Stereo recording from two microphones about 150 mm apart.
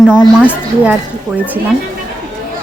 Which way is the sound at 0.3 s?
5° right (ahead or behind).